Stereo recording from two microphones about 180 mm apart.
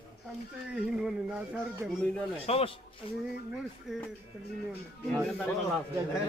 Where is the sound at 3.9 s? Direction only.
Centre (ahead or behind).